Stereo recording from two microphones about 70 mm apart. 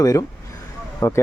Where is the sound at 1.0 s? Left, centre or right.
Left.